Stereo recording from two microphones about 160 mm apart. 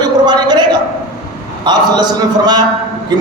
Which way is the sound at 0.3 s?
25° right (ahead or behind).